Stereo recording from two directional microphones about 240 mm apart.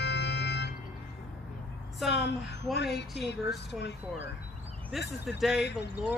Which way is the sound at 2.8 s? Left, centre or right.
Left.